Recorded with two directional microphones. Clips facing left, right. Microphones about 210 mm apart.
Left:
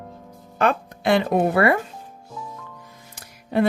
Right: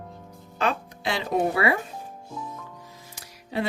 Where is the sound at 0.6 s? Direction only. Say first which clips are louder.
Left 5 dB; 55° left (ahead or behind).